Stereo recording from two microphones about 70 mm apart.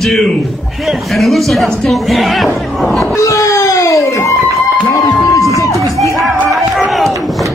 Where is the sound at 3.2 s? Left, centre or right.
Left.